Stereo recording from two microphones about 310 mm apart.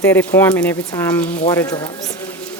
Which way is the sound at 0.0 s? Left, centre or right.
Centre.